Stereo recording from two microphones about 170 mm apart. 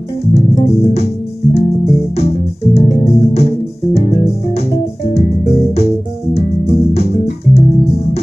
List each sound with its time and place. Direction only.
0.3 s music: 35° left (ahead or behind)